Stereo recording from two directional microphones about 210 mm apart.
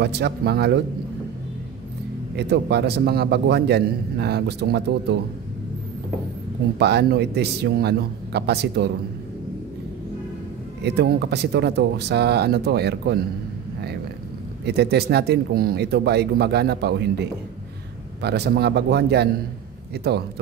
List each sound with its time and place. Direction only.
0.0 s a man's voice: 50° right (ahead or behind)
2.3 s a man's voice: 55° right (ahead or behind)
6.8 s a man's voice: 50° right (ahead or behind)
10.8 s a man's voice: 50° right (ahead or behind)
14.6 s a man's voice: 50° right (ahead or behind)